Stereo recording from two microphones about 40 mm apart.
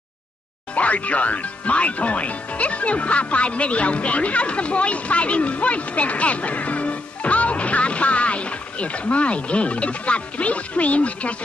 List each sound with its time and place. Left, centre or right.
0.7 s speech: left